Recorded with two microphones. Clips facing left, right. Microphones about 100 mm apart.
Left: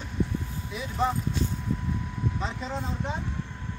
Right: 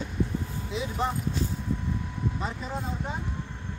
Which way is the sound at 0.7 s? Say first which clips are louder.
Right 4 dB; 25° right (ahead or behind).